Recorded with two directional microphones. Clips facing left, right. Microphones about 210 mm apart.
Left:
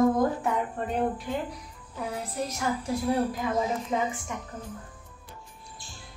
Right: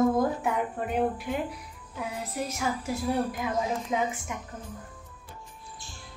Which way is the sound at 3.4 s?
5° right (ahead or behind).